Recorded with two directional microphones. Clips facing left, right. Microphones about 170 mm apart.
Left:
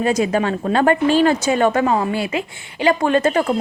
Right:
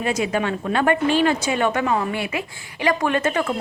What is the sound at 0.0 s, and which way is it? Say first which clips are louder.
A woman's voice: left 4 dB; 40° left (ahead or behind).